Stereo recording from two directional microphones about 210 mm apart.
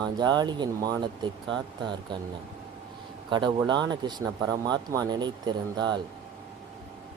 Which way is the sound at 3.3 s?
20° right (ahead or behind).